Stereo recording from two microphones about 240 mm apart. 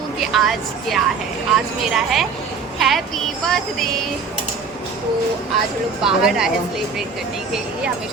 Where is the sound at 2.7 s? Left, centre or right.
Centre.